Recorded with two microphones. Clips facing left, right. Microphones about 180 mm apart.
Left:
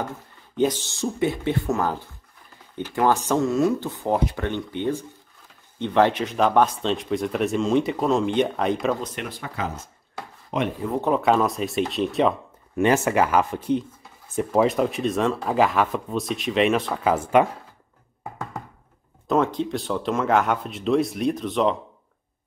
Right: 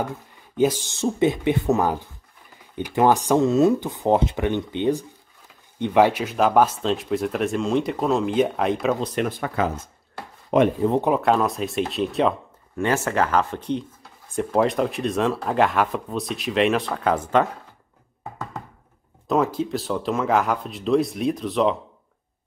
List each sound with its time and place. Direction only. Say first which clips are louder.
0.6 s speech: right 2 dB; 10° right (ahead or behind)
10.5 s speech: right 8 dB; 55° right (ahead or behind)
11.1 s speech: even; centre (ahead or behind)
12.7 s speech: left 3 dB; 15° left (ahead or behind)
19.2 s speech: even; 5° right (ahead or behind)